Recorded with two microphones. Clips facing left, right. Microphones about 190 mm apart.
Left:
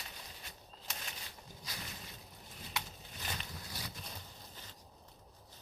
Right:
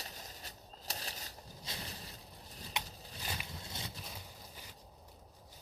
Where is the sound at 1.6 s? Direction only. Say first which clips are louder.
Right 2 dB; 35° right (ahead or behind).